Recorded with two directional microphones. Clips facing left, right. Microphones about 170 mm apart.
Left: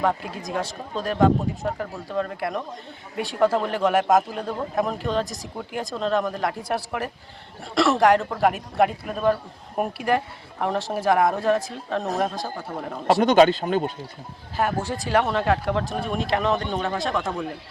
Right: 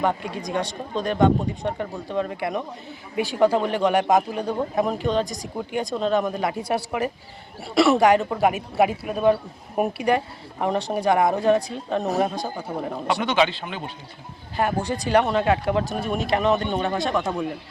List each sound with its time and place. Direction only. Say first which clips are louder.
0.0 s speech: even; centre (ahead or behind)
13.2 s speech: left 7 dB; 45° left (ahead or behind)
14.5 s speech: right 1 dB; centre (ahead or behind)